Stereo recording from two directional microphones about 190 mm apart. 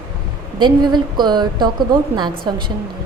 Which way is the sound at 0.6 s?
25° right (ahead or behind).